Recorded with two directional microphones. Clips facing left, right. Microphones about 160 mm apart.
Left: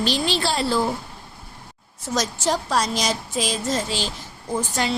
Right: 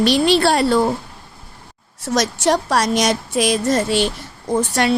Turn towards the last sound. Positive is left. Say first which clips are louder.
# right 7 dB
turn(degrees=-65)  # may be behind; listen again after turning